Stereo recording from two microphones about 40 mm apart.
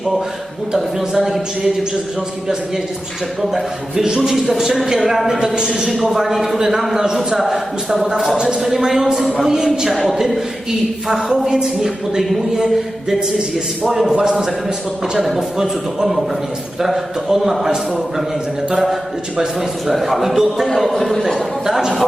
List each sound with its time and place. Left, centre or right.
1.1 s speech: centre
3.4 s speech: centre
8.4 s speech: centre
8.6 s speech: centre
14.1 s speech: right
15.2 s speech: centre
18.7 s speech: centre
20.7 s speech: centre